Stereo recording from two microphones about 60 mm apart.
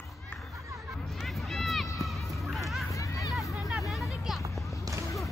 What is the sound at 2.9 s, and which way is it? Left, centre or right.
Hubbub, left.